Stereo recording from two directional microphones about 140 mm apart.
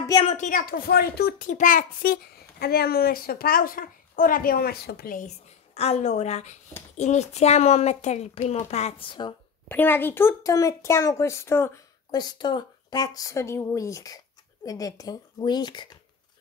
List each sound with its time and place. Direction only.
0.2 s speech: 50° left (ahead or behind)
0.5 s a child's voice: 80° left
5.8 s speech: 50° left (ahead or behind); by 9.3 s 35° left (ahead or behind)
9.7 s speech: 15° left (ahead or behind)
12.1 s speech: 30° left (ahead or behind)